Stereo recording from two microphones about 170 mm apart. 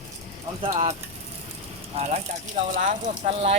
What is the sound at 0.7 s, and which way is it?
Speech, 40° right (ahead or behind).